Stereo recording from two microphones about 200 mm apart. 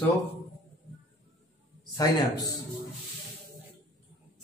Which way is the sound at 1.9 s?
15° left (ahead or behind).